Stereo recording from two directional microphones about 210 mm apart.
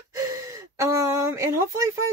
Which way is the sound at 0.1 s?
15° right (ahead or behind).